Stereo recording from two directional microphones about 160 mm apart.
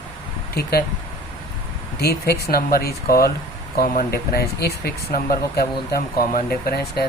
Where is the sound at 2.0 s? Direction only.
75° left (ahead or behind).